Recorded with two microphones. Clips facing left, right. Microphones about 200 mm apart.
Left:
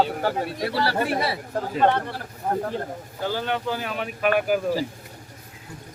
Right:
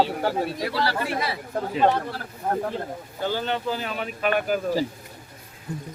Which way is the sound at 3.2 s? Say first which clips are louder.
Even; 5° left (ahead or behind).